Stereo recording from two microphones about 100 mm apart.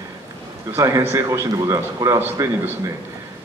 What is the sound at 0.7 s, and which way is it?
Speech, 30° right (ahead or behind).